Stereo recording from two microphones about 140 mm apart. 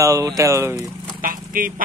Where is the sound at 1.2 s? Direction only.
80° right.